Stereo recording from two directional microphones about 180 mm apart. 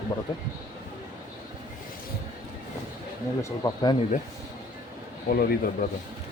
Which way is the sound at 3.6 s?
20° left (ahead or behind).